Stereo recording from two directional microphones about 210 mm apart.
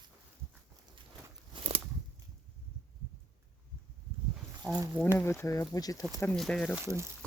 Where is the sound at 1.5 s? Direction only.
25° right (ahead or behind).